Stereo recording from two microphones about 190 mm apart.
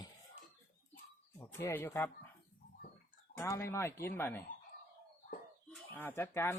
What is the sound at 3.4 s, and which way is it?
Speech, 15° left (ahead or behind).